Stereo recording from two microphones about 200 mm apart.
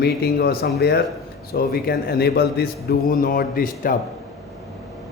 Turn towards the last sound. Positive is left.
turn(degrees=45)  # may be behind; listen again after turning